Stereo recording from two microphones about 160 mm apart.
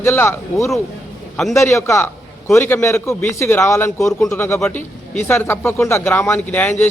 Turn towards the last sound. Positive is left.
turn(degrees=10)  # may be behind; listen again after turning